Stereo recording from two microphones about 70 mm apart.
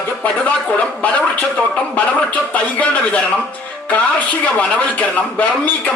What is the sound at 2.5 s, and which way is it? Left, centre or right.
Speech, centre.